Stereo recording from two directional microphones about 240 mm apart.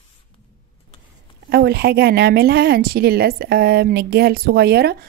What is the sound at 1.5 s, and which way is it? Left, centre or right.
Speech, right.